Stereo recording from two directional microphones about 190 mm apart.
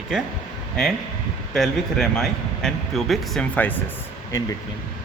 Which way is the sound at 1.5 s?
Centre (ahead or behind).